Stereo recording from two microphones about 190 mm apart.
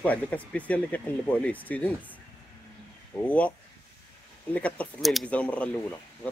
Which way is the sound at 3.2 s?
5° left (ahead or behind).